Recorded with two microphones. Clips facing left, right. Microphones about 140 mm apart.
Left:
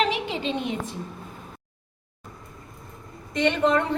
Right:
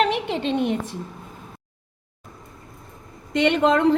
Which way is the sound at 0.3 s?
55° right (ahead or behind).